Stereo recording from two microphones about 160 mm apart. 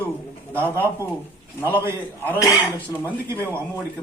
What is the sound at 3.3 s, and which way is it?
Speech, 15° right (ahead or behind).